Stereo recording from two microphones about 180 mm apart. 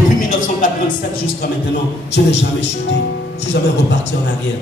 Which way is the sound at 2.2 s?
70° left (ahead or behind).